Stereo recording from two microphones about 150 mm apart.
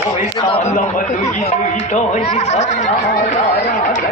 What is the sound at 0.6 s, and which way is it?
Speech, 55° left (ahead or behind).